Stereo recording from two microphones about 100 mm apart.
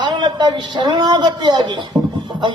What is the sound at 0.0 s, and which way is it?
A man's voice, 50° right (ahead or behind).